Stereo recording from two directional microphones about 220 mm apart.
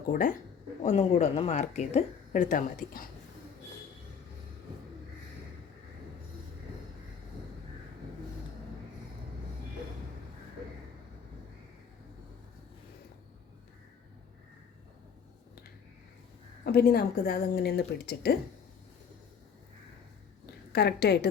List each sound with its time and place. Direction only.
0.1 s speech: 40° left (ahead or behind)
16.7 s a woman's voice: 45° left (ahead or behind)
20.7 s a woman's voice: 45° left (ahead or behind)